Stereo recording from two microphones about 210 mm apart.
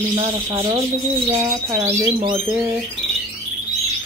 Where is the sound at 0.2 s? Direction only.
20° right (ahead or behind).